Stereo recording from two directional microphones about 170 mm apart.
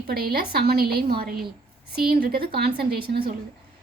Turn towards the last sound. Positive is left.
turn(degrees=-65)  # may be behind; listen again after turning